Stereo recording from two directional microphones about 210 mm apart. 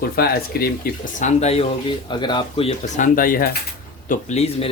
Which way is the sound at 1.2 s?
35° left (ahead or behind).